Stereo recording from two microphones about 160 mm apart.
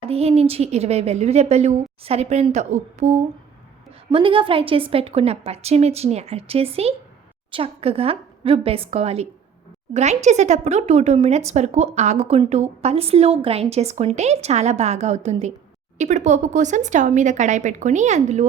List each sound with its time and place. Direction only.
0.1 s speech: 40° right (ahead or behind)
4.1 s speech: 35° right (ahead or behind)